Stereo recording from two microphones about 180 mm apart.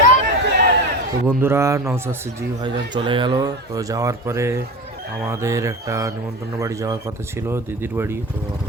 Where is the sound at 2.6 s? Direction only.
25° right (ahead or behind).